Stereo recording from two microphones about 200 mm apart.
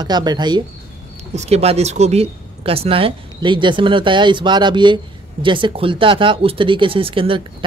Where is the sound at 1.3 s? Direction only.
30° right (ahead or behind).